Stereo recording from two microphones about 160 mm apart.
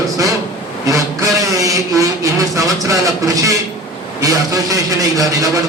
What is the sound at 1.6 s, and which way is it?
A man's voice, 20° right (ahead or behind).